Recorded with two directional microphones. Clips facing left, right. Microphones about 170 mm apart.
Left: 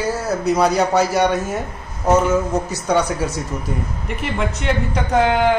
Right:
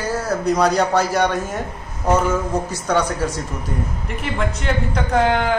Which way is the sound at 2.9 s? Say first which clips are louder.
Left 1 dB; 10° left (ahead or behind).